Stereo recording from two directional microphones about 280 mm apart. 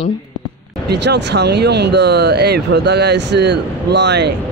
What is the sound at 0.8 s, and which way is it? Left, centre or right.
Speech, right.